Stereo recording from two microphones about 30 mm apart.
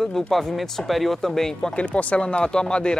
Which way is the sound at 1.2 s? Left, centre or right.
Centre.